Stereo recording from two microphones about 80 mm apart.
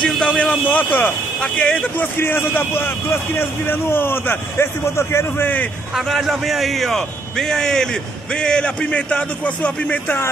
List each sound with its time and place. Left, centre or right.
0.0 s a man's voice: centre
2.0 s speech: left
5.9 s a man's voice: centre